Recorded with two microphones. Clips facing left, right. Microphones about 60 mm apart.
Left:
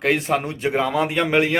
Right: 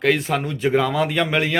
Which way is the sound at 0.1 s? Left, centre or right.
Left.